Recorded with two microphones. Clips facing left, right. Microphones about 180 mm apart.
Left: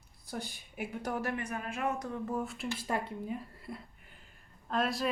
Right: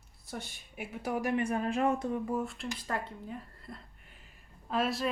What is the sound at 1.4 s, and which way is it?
Speech, 30° right (ahead or behind).